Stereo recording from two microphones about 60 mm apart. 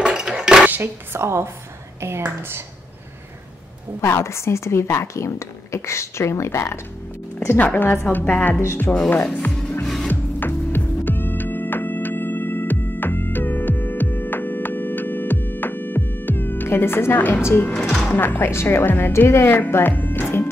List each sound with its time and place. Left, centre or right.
0.0 s dishes: centre
0.7 s speech: right
1.2 s speech: right
4.0 s a woman's voice: left
7.5 s a woman's voice: left
8.9 s speech: centre
9.5 s music: centre
10.0 s music: left
18.1 s a woman's voice: left